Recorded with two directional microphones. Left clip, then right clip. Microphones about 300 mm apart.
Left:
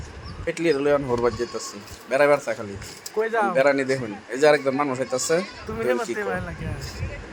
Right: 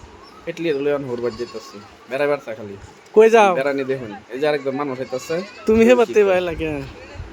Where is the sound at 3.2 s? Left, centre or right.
Right.